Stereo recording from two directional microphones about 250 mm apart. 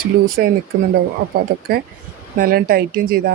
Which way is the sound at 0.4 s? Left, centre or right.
Right.